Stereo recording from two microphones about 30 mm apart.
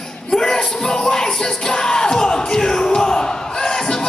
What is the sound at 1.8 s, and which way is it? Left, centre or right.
Speech, left.